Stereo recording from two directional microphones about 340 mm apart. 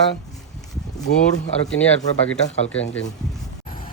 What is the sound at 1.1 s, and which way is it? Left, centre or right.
Speech, left.